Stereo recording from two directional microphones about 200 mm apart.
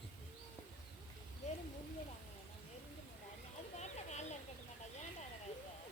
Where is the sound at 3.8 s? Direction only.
35° left (ahead or behind).